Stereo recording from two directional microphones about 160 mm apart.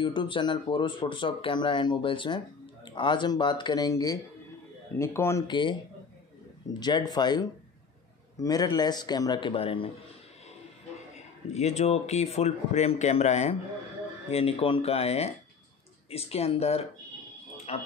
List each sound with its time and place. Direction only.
0.0 s speech: 30° left (ahead or behind)
5.5 s speech: 30° left (ahead or behind)
6.8 s speech: 25° left (ahead or behind)
11.1 s speech: 45° left (ahead or behind)